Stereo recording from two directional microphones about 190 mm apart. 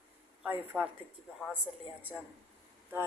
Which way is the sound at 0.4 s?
10° right (ahead or behind).